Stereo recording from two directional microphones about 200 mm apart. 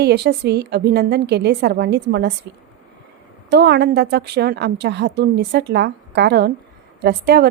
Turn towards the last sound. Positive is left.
turn(degrees=-55)  # may be behind; listen again after turning